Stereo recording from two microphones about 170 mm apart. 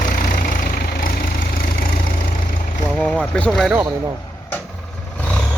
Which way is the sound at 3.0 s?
5° left (ahead or behind).